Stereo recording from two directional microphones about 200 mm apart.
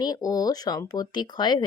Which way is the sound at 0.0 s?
20° left (ahead or behind).